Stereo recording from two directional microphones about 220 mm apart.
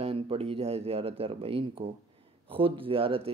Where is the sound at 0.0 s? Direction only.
25° right (ahead or behind).